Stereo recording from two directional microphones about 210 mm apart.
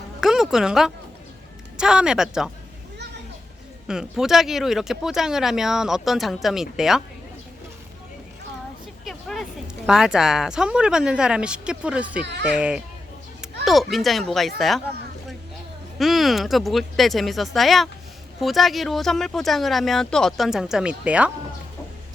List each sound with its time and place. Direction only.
0.2 s a woman's voice: centre (ahead or behind)
3.8 s speech: centre (ahead or behind)
9.0 s speech: centre (ahead or behind)
12.2 s speech: 55° right (ahead or behind)
12.5 s speech: 5° right (ahead or behind)
13.4 s a sound: centre (ahead or behind)
13.9 s speech: centre (ahead or behind)
16.0 s speech: centre (ahead or behind)